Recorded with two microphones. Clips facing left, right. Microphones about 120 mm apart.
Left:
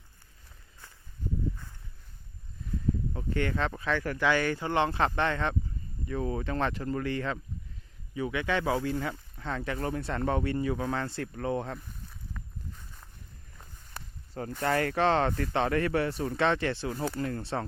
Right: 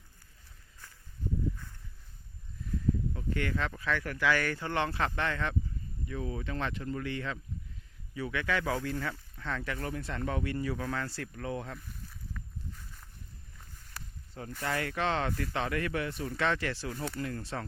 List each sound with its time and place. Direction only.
3.1 s speech: 35° left (ahead or behind)
4.3 s speech: 20° left (ahead or behind)
6.1 s speech: 45° left (ahead or behind)
8.1 s speech: 20° left (ahead or behind)
14.6 s speech: 45° left (ahead or behind)